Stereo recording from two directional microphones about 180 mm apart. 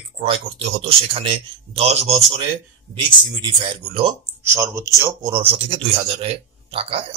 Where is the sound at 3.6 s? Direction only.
30° right (ahead or behind).